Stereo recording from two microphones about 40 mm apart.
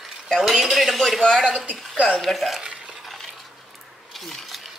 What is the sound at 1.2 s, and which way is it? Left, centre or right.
Speech, centre.